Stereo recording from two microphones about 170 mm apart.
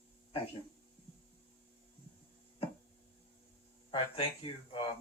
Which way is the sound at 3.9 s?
30° left (ahead or behind).